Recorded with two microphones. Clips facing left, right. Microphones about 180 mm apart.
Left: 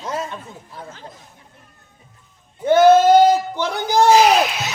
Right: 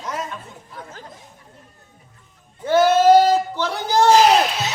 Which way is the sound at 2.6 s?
20° left (ahead or behind).